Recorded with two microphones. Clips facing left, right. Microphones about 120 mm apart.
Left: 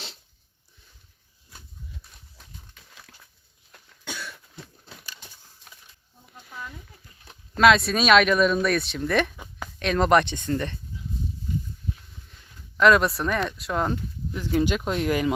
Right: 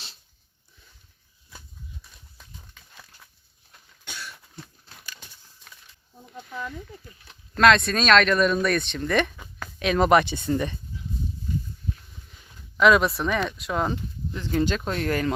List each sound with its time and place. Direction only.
3.7 s cough: 70° left (ahead or behind)
7.5 s speech: 5° left (ahead or behind); by 10.8 s 10° right (ahead or behind)
12.3 s speech: 5° right (ahead or behind); by 15.3 s 10° left (ahead or behind)